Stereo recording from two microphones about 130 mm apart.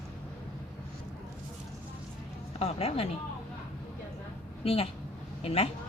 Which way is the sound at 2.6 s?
50° left (ahead or behind).